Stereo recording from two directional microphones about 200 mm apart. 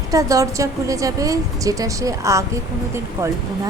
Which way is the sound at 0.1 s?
15° right (ahead or behind).